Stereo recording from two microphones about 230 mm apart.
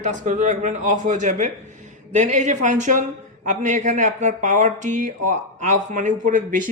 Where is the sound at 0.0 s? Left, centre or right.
Right.